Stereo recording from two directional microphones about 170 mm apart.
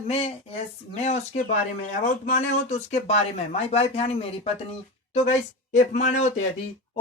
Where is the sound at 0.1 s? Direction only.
35° left (ahead or behind).